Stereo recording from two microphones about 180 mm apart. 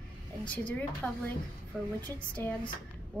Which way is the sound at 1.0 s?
Centre (ahead or behind).